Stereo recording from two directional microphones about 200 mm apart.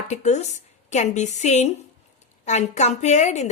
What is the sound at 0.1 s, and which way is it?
A woman's voice, 35° left (ahead or behind).